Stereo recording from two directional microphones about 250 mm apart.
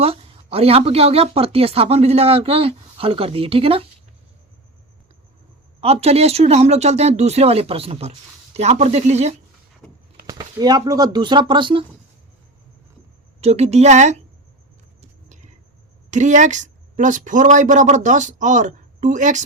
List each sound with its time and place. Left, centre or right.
0.0 s a woman's voice: right
5.8 s a woman's voice: right
10.2 s speech: centre
13.4 s a woman's voice: right
16.0 s a woman's voice: right